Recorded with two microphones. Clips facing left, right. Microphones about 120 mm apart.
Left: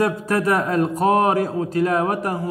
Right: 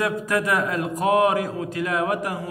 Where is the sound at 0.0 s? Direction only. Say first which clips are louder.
Left 3 dB; 35° left (ahead or behind).